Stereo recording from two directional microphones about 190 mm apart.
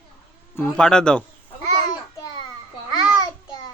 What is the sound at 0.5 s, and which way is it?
Speech, 10° left (ahead or behind).